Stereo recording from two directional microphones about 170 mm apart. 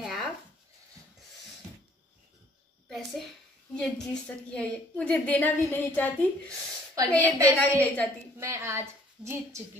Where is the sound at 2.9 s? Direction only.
Centre (ahead or behind).